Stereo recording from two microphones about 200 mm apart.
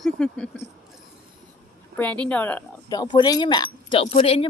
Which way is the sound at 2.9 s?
20° left (ahead or behind).